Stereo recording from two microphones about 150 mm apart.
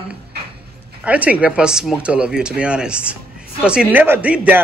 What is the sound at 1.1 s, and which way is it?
Speech, 10° right (ahead or behind).